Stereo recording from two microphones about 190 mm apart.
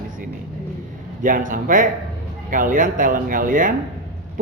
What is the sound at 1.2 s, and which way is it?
A man's voice, 45° right (ahead or behind).